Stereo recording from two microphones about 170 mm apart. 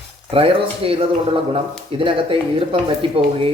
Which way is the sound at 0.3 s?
35° right (ahead or behind).